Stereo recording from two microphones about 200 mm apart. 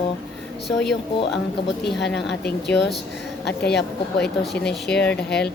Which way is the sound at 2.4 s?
60° left (ahead or behind).